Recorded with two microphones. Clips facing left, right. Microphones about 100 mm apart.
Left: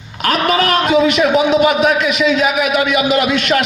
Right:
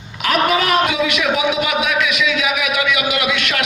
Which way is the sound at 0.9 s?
40° left (ahead or behind).